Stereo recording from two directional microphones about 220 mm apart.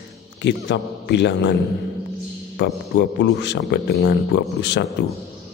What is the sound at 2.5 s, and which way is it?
Speech, 50° left (ahead or behind).